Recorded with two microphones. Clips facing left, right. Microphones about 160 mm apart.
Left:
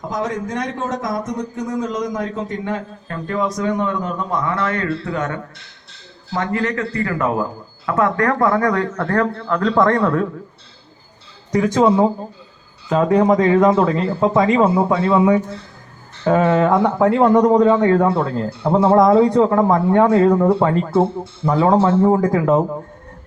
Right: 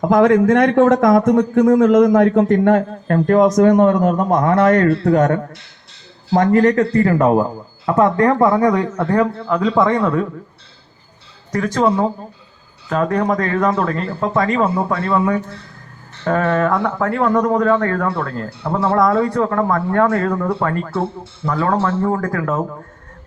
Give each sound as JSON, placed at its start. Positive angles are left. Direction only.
{"t": 0.0, "sound": "speech", "side_deg": -55}
{"t": 7.9, "sound": "a man's voice", "side_deg": -25}
{"t": 11.5, "sound": "speech", "side_deg": 15}